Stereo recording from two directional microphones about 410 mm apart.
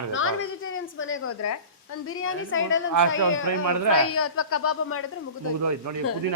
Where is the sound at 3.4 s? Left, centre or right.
Right.